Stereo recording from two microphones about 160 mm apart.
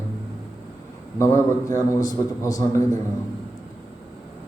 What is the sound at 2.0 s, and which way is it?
Speech, 25° left (ahead or behind).